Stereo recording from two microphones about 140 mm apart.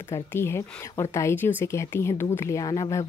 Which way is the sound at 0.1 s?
15° left (ahead or behind).